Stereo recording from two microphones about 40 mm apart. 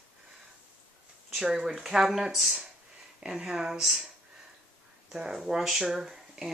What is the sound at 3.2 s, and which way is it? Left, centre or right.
Speech, centre.